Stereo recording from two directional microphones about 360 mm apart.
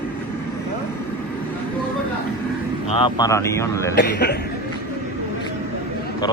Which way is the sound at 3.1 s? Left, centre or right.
Centre.